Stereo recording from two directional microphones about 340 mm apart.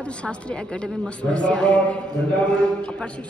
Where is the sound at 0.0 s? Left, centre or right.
Centre.